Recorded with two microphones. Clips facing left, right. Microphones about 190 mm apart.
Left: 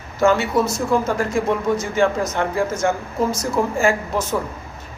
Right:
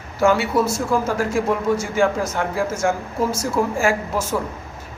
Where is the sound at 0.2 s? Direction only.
10° right (ahead or behind).